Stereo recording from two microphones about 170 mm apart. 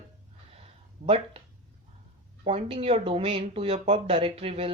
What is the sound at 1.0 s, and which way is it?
Speech, 35° right (ahead or behind).